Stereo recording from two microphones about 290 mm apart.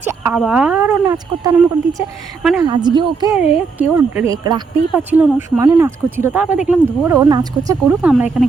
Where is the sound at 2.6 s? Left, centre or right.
Centre.